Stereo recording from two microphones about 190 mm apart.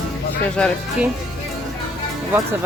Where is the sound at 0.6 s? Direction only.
5° left (ahead or behind).